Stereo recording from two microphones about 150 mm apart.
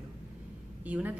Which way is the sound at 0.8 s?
10° right (ahead or behind).